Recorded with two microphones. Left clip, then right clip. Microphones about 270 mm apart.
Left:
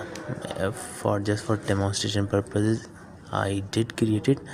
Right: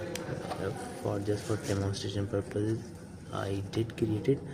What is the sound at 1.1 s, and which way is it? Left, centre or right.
Speech, left.